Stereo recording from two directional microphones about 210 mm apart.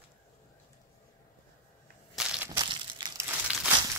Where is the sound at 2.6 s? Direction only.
20° right (ahead or behind).